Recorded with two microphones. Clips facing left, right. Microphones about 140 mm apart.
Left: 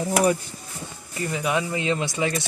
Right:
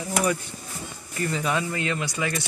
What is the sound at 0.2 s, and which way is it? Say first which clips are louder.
Speech: left 3 dB; 40° left (ahead or behind).